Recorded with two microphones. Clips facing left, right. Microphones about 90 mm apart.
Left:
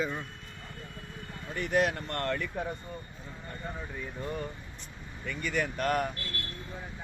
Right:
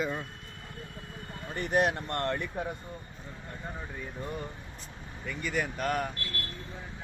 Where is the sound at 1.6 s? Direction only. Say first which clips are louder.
Right 1 dB; 25° right (ahead or behind).